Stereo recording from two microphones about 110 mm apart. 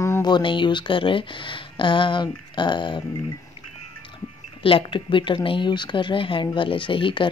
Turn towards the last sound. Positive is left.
turn(degrees=50)  # may be behind; listen again after turning